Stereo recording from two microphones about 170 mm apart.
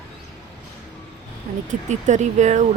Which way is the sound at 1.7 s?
45° right (ahead or behind).